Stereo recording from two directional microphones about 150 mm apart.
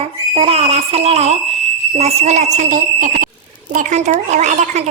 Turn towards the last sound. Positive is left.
turn(degrees=-50)  # may be behind; listen again after turning